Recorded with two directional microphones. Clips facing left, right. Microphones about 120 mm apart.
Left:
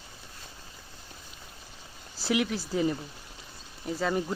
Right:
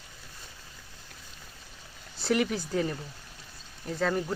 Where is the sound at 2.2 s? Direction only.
Centre (ahead or behind).